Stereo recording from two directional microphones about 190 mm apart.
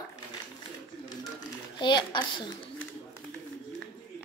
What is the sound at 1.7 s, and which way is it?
Speech, 25° left (ahead or behind).